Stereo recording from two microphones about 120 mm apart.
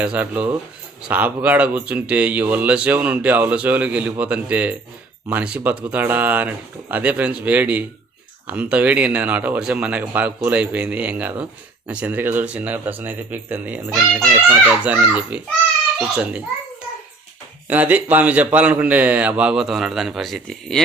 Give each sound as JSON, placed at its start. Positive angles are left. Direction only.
{"t": 0.0, "sound": "speech", "side_deg": -10}
{"t": 17.7, "sound": "speech", "side_deg": -15}